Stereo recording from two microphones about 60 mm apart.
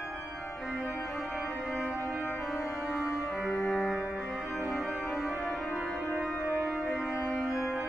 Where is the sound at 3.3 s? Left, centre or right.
Centre.